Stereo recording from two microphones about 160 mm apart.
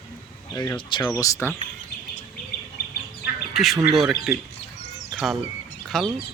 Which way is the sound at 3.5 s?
Centre (ahead or behind).